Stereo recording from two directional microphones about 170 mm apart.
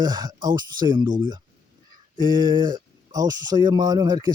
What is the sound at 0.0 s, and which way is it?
Speech, 25° right (ahead or behind).